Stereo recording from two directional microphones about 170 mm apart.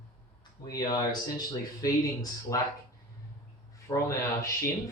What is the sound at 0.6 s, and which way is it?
Speech, 20° left (ahead or behind).